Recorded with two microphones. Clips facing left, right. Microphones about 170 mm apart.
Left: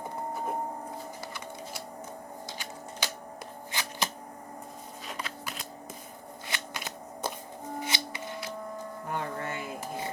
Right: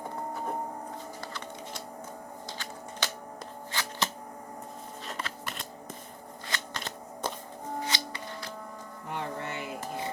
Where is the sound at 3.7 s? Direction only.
15° left (ahead or behind).